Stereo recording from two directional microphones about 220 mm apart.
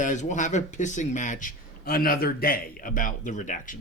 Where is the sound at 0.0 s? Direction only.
35° left (ahead or behind).